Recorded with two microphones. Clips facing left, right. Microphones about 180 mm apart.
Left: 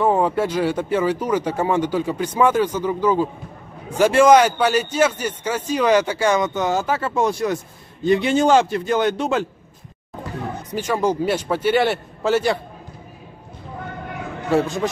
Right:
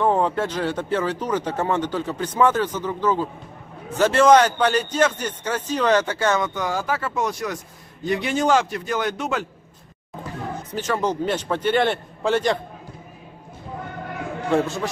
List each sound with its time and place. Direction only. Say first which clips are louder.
0.0 s speech: left 2 dB; 10° left (ahead or behind); by 9.5 s 30° left (ahead or behind)
10.7 s speech: left 3 dB; 10° left (ahead or behind)
14.5 s speech: left 2 dB; 10° left (ahead or behind)